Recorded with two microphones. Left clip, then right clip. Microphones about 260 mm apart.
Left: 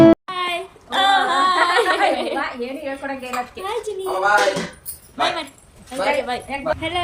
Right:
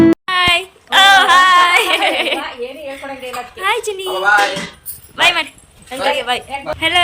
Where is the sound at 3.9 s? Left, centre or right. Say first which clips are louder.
Right 5 dB; right.